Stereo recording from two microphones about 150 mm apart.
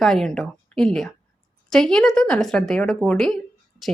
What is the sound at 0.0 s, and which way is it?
A woman's voice, centre (ahead or behind).